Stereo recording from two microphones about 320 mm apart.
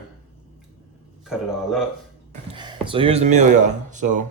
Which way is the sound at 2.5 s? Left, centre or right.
Centre.